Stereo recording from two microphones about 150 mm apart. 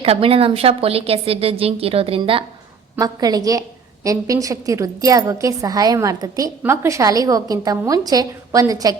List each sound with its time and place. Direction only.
0.0 s a woman's voice: 40° right (ahead or behind)
2.9 s a woman's voice: 25° right (ahead or behind)